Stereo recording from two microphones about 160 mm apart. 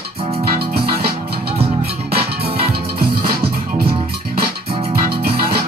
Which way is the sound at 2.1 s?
80° right.